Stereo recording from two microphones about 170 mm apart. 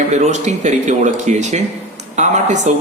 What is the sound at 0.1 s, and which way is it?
Speech, 40° right (ahead or behind).